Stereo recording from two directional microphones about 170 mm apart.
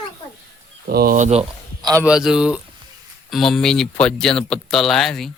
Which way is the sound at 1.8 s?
20° right (ahead or behind).